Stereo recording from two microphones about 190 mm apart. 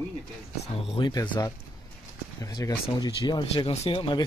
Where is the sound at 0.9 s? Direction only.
25° left (ahead or behind).